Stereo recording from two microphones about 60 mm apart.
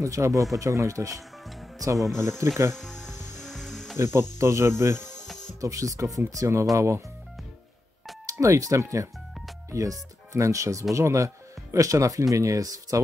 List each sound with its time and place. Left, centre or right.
0.0 s speech: right
2.0 s speech: centre
2.2 s speech: right
2.7 s music: centre
4.0 s speech: right
5.6 s speech: right
8.3 s speech: right